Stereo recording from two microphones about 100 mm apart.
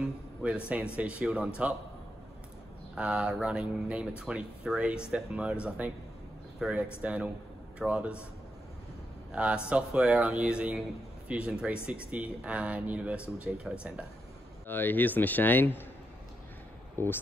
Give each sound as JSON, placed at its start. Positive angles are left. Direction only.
{"t": 0.0, "sound": "speech", "side_deg": -10}
{"t": 2.9, "sound": "speech", "side_deg": -10}
{"t": 9.3, "sound": "speech", "side_deg": -10}
{"t": 14.7, "sound": "speech", "side_deg": 20}
{"t": 16.9, "sound": "speech", "side_deg": 25}